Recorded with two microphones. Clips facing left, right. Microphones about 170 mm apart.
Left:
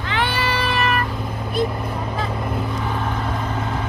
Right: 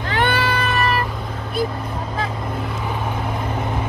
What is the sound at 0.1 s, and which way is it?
Cat, 55° right (ahead or behind).